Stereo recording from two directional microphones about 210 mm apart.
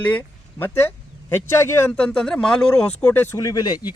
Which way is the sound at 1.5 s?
10° left (ahead or behind).